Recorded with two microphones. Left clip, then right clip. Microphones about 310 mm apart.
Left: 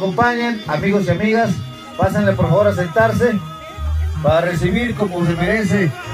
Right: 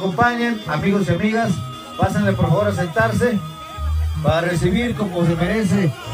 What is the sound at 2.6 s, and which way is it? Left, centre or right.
Speech, left.